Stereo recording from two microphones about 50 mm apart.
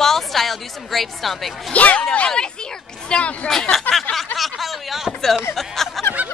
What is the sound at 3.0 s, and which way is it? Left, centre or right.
Speech, left.